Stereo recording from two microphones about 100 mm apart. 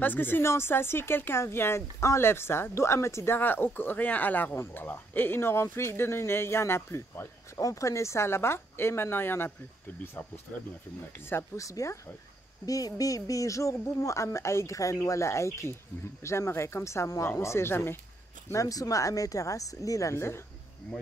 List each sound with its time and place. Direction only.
0.0 s speech: 20° left (ahead or behind)
11.2 s speech: 25° left (ahead or behind)
18.5 s speech: 35° left (ahead or behind)